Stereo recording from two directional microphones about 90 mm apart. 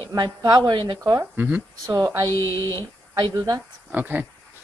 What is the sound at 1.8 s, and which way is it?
Speech, 40° right (ahead or behind).